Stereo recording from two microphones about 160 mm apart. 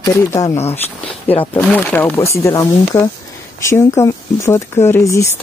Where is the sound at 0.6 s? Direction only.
40° left (ahead or behind).